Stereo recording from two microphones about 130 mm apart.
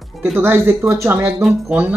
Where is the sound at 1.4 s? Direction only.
5° right (ahead or behind).